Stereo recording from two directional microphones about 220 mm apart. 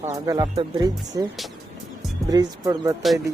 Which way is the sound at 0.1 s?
15° right (ahead or behind).